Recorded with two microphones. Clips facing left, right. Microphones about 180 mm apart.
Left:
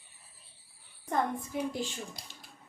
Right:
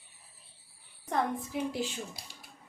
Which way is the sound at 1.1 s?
5° right (ahead or behind).